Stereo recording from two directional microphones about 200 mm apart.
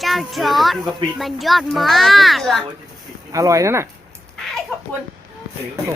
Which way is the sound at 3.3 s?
15° right (ahead or behind).